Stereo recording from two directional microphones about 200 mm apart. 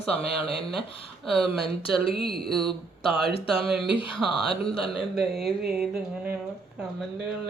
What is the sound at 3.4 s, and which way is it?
Speech, 25° left (ahead or behind).